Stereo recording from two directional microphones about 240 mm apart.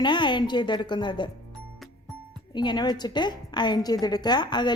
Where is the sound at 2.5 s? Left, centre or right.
Centre.